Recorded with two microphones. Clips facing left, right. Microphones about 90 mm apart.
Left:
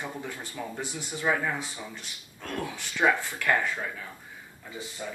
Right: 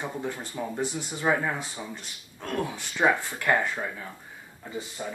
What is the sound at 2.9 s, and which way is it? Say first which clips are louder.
Speech: right 1 dB; 20° right (ahead or behind).